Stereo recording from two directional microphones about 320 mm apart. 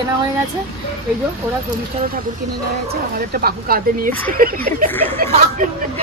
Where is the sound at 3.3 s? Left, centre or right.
Right.